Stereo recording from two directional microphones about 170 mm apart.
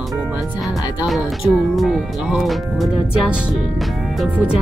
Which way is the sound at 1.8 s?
Centre (ahead or behind).